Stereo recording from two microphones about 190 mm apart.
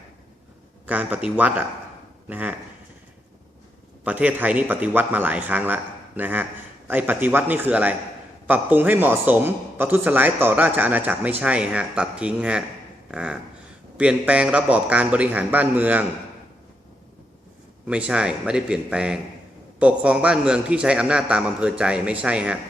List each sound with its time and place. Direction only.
0.9 s a man's voice: 10° right (ahead or behind)
4.0 s a man's voice: 10° right (ahead or behind)
13.1 s a sound: 5° right (ahead or behind)
13.9 s a man's voice: 5° right (ahead or behind)
17.8 s a man's voice: 5° right (ahead or behind)